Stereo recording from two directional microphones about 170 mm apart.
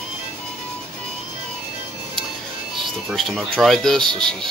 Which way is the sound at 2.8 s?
Centre (ahead or behind).